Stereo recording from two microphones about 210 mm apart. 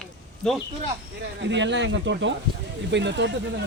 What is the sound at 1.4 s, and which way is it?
Speech, 55° right (ahead or behind).